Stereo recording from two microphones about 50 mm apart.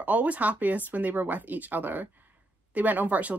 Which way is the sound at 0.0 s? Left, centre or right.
Right.